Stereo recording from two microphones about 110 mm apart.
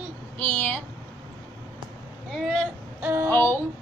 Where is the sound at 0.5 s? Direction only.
15° left (ahead or behind).